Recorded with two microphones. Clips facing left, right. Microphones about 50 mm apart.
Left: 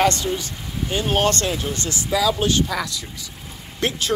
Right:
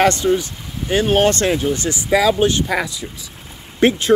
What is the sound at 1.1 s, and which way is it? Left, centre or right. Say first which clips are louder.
Speech: right 5 dB; centre.